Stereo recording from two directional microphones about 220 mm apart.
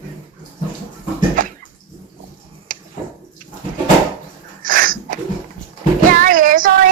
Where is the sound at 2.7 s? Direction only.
40° right (ahead or behind).